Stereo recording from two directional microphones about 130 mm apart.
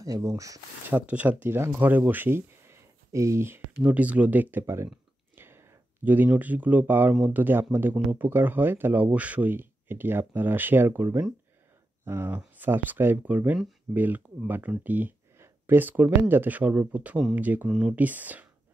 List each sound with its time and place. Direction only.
0.0 s speech: 30° right (ahead or behind); by 18.5 s 10° right (ahead or behind)